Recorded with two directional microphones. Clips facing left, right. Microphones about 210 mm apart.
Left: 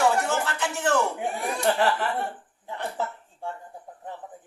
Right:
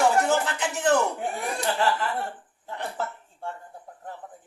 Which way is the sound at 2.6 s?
15° left (ahead or behind).